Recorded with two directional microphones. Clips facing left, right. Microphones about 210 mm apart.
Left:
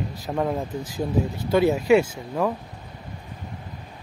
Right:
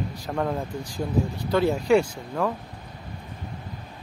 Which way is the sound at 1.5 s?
10° left (ahead or behind).